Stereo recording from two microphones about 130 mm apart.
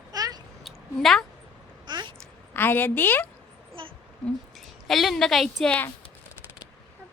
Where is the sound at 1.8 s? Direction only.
35° right (ahead or behind).